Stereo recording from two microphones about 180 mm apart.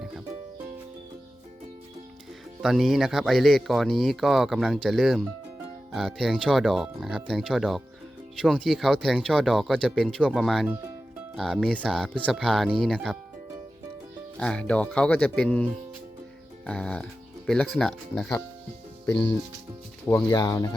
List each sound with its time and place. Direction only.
2.6 s speech: centre (ahead or behind)
14.3 s speech: 5° left (ahead or behind)
16.6 s speech: 5° left (ahead or behind)
20.3 s speech: 20° left (ahead or behind)